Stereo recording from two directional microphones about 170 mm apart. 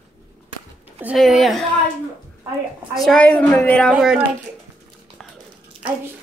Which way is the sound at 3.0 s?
5° left (ahead or behind).